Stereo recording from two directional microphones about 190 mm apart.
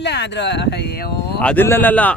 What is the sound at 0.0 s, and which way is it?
Speech, 65° left (ahead or behind).